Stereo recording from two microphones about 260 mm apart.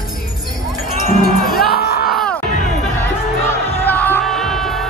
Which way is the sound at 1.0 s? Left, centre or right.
Left.